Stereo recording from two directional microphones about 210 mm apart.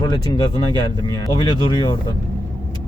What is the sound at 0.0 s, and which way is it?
Speech, 20° left (ahead or behind).